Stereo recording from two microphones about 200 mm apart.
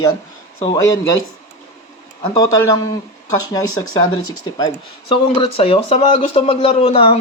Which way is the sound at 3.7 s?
90° left.